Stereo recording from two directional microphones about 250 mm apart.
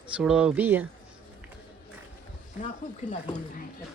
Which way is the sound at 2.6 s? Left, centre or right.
Left.